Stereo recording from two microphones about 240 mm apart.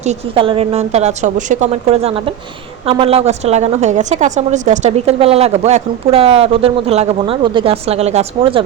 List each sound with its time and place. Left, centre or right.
0.0 s a woman's voice: right